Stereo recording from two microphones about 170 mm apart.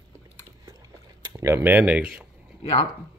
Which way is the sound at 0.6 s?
20° right (ahead or behind).